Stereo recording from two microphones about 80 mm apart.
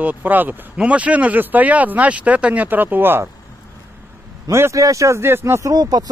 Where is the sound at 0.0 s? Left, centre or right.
Right.